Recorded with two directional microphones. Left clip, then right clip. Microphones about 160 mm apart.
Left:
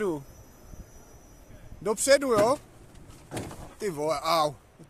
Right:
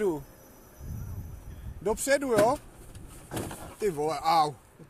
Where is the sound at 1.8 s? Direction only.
25° left (ahead or behind).